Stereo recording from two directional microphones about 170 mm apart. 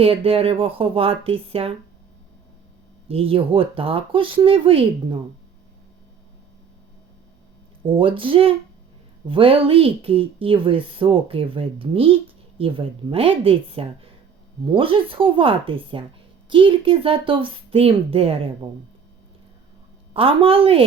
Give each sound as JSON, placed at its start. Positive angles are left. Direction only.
{"t": 0.0, "sound": "speech", "side_deg": -35}
{"t": 3.1, "sound": "speech", "side_deg": -35}
{"t": 7.9, "sound": "speech", "side_deg": -30}
{"t": 20.1, "sound": "speech", "side_deg": -35}